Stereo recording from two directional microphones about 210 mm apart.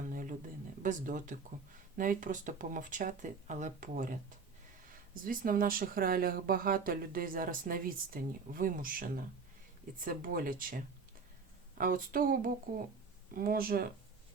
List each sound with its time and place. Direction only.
0.1 s a sound: 40° right (ahead or behind)
0.8 s speech: 40° right (ahead or behind)
5.2 s speech: 40° right (ahead or behind)